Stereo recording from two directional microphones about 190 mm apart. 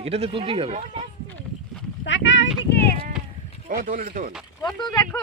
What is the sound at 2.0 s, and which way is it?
Speech, 70° left (ahead or behind).